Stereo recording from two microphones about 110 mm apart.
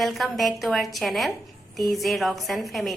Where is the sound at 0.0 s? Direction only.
Centre (ahead or behind).